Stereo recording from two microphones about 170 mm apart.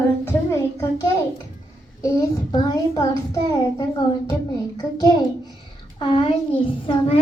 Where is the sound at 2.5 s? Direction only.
20° left (ahead or behind).